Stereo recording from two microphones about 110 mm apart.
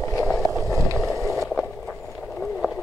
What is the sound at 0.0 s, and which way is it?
Vehicle, 25° left (ahead or behind).